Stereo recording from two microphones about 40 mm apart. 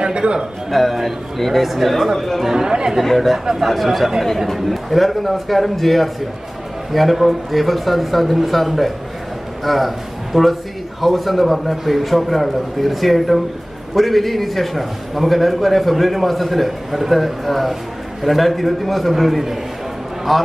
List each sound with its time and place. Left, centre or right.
0.0 s a man's voice: right
0.7 s a man's voice: centre
2.5 s speech: centre
3.0 s a man's voice: centre